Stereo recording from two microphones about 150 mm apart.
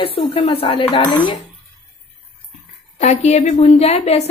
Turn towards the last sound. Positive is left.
turn(degrees=45)  # may be behind; listen again after turning